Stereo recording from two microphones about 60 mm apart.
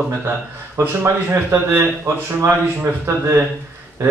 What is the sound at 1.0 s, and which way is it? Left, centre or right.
Speech, right.